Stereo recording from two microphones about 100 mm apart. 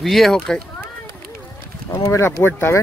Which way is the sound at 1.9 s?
30° left (ahead or behind).